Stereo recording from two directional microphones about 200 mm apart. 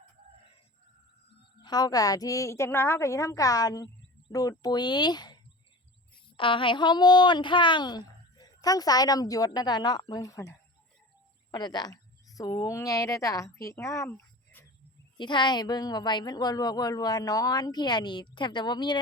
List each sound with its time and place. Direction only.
1.6 s a woman's voice: 20° left (ahead or behind)
15.2 s a woman's voice: 25° left (ahead or behind)